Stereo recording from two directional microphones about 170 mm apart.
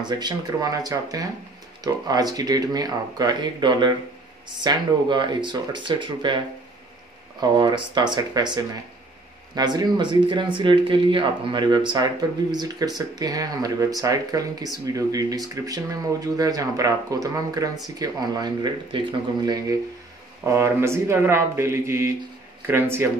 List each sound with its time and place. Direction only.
0.0 s speech: 25° right (ahead or behind)